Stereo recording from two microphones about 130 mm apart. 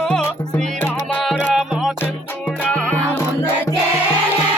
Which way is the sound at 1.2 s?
5° right (ahead or behind).